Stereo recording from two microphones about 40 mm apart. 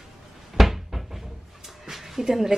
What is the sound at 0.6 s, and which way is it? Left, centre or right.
Cupboard open or close, centre.